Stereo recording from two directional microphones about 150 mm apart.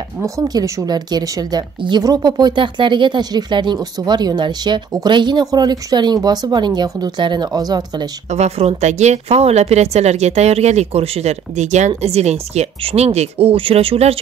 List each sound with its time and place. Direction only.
0.2 s a woman's voice: 25° right (ahead or behind)
8.3 s speech: 45° right (ahead or behind)